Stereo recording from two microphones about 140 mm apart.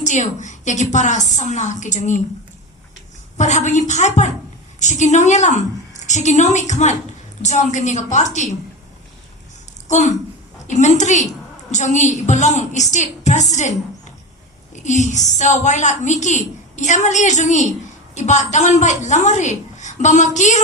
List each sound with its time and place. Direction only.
0.0 s a woman's voice: 60° left (ahead or behind)
3.3 s a woman's voice: 60° left (ahead or behind)
9.9 s a woman's voice: 60° left (ahead or behind)
14.8 s a woman's voice: 60° left (ahead or behind)